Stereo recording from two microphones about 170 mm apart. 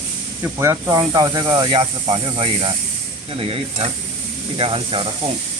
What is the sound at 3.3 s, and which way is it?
Stir, 35° right (ahead or behind).